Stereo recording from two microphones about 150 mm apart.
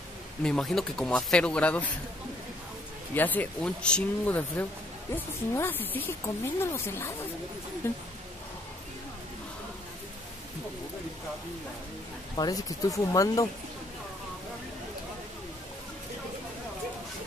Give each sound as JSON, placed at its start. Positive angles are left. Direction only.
{"t": 0.4, "sound": "speech", "side_deg": 5}
{"t": 3.2, "sound": "speech", "side_deg": 10}
{"t": 12.4, "sound": "speech", "side_deg": 25}